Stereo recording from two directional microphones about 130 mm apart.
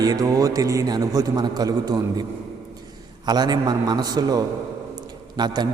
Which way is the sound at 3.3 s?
30° right (ahead or behind).